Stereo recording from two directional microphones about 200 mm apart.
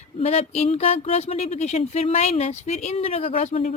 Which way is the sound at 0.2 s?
35° left (ahead or behind).